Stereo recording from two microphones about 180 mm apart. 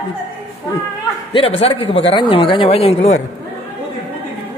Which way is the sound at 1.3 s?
30° left (ahead or behind).